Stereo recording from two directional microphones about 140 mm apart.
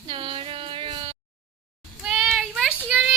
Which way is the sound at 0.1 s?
40° right (ahead or behind).